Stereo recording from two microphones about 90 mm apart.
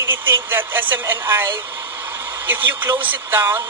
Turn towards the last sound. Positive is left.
turn(degrees=-25)  # may be behind; listen again after turning